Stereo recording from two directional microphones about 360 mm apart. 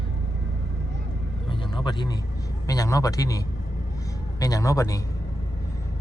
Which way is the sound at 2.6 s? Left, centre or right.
Centre.